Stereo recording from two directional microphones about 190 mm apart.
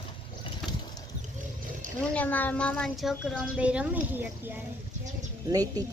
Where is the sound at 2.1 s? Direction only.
10° left (ahead or behind); by 5.8 s 20° right (ahead or behind).